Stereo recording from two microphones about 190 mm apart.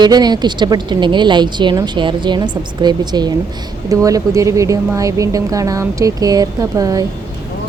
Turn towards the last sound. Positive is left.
turn(degrees=-20)  # may be behind; listen again after turning